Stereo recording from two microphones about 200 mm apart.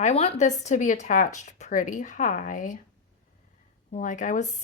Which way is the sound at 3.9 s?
40° left (ahead or behind).